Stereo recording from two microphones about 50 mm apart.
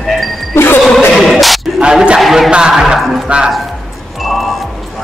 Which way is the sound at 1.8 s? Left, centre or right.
Centre.